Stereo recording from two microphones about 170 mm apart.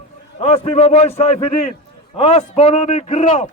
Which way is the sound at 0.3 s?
35° left (ahead or behind).